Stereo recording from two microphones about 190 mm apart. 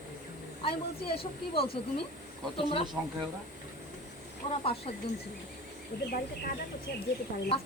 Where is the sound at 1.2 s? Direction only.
30° left (ahead or behind).